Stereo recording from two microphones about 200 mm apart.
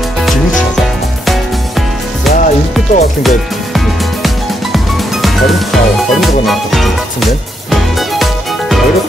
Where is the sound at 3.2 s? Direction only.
Centre (ahead or behind).